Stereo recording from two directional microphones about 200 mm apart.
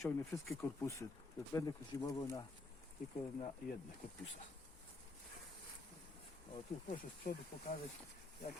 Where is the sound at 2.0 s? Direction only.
15° left (ahead or behind).